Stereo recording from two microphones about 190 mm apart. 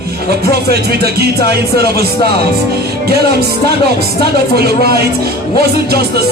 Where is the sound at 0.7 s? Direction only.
55° right (ahead or behind).